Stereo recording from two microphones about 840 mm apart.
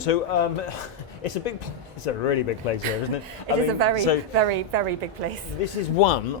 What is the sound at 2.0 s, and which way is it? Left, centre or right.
Speech, left.